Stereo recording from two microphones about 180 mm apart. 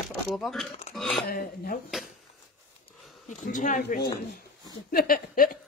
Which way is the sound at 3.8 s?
55° left (ahead or behind).